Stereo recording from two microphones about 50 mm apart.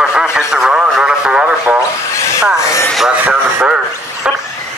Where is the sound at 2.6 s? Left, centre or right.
Left.